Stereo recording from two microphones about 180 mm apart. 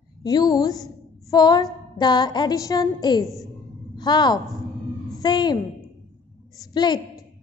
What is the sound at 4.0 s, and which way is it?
A woman's voice, 25° left (ahead or behind).